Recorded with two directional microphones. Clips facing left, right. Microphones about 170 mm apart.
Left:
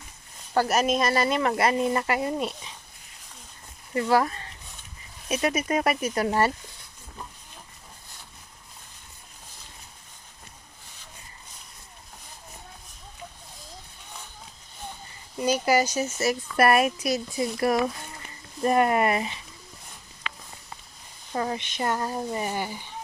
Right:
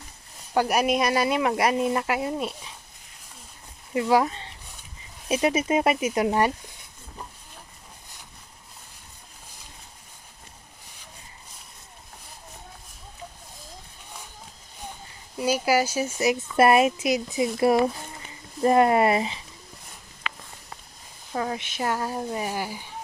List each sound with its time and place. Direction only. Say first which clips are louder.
0.5 s speech: right 1 dB; 15° right (ahead or behind)
3.9 s speech: right 1 dB; 10° right (ahead or behind)
5.3 s speech: right 3 dB; 25° right (ahead or behind)
15.4 s speech: even; 5° right (ahead or behind); by 19.4 s 25° right (ahead or behind)
21.3 s speech: even; centre (ahead or behind)